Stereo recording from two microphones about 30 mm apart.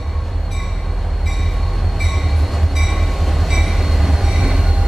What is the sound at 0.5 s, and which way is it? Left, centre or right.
Train, centre.